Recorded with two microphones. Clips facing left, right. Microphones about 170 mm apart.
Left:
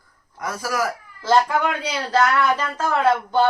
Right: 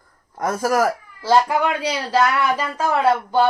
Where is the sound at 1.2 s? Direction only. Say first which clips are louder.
Right 1 dB; 10° right (ahead or behind).